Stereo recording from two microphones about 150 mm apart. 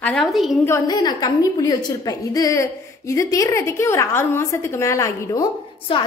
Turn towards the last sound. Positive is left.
turn(degrees=35)  # may be behind; listen again after turning